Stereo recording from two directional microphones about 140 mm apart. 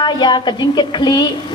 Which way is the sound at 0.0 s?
30° left (ahead or behind).